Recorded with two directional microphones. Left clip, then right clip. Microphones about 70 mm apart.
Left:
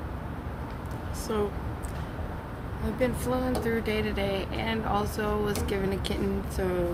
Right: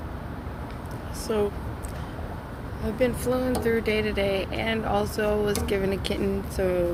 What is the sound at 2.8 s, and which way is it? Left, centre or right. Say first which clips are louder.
Speech: right 4 dB; left.